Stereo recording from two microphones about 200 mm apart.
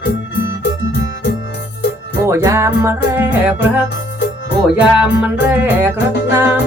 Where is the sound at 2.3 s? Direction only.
15° right (ahead or behind).